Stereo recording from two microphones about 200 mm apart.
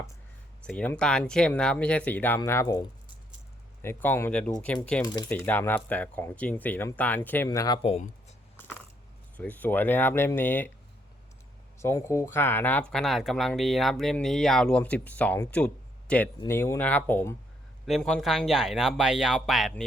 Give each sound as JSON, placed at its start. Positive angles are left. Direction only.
{"t": 0.6, "sound": "speech", "side_deg": 5}
{"t": 5.0, "sound": "speech", "side_deg": 20}
{"t": 9.4, "sound": "speech", "side_deg": 10}
{"t": 11.8, "sound": "speech", "side_deg": 15}